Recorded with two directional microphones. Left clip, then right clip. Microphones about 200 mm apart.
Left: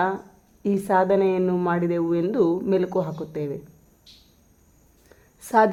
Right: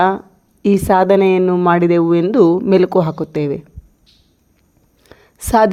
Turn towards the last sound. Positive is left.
turn(degrees=-35)  # may be behind; listen again after turning